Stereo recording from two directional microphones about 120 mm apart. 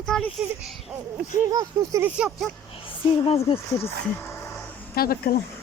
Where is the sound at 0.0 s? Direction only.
5° left (ahead or behind).